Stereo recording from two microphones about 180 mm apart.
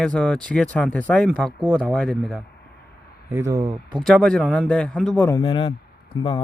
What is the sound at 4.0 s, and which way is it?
Speech, 5° left (ahead or behind).